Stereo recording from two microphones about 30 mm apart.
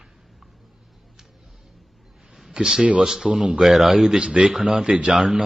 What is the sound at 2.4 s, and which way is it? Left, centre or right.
Speech, centre.